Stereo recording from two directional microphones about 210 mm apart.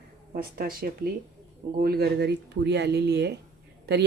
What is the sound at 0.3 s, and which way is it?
A woman's voice, 45° right (ahead or behind).